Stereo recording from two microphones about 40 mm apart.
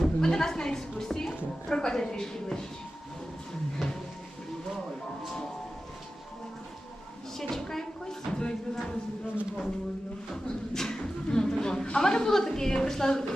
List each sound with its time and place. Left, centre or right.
0.0 s bleat: centre
1.7 s a woman's voice: centre
7.3 s a sound: centre
10.3 s a woman's voice: centre